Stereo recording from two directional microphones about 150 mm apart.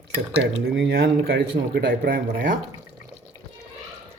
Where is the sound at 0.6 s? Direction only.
85° right; by 2.5 s 70° right (ahead or behind).